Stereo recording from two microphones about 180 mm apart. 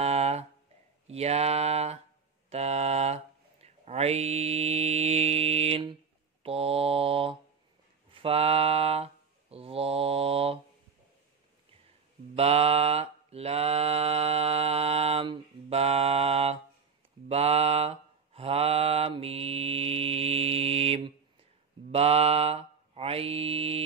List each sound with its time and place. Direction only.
0.0 s a sound: 35° right (ahead or behind)
1.0 s speech: 35° right (ahead or behind)
3.6 s mantra: 35° right (ahead or behind)
12.4 s mantra: 35° right (ahead or behind)